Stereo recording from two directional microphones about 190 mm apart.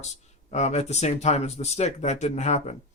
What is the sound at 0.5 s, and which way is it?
Speech, 35° left (ahead or behind).